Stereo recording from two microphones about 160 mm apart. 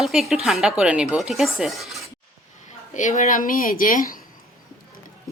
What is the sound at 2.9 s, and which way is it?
A woman's voice, 50° left (ahead or behind).